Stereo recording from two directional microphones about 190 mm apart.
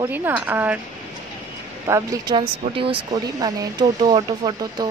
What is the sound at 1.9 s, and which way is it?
A woman's voice, 15° right (ahead or behind).